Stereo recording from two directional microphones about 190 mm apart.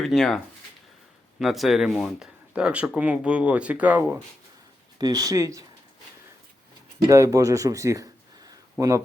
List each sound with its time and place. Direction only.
0.0 s speech: centre (ahead or behind)
4.9 s speech: 20° right (ahead or behind)
7.1 s speech: 15° right (ahead or behind)